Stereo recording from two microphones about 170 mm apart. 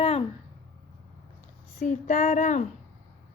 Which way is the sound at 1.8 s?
45° left (ahead or behind).